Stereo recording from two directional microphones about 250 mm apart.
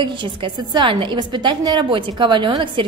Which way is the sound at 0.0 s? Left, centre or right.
Centre.